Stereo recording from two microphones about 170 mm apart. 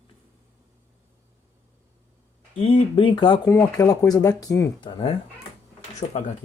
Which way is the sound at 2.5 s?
30° left (ahead or behind).